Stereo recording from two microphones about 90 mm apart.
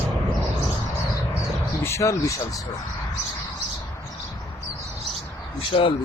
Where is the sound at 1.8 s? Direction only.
30° left (ahead or behind).